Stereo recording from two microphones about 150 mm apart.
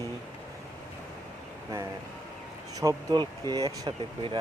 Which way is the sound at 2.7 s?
25° right (ahead or behind).